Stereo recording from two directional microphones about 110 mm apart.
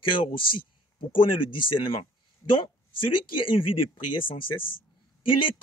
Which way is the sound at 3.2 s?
50° left (ahead or behind).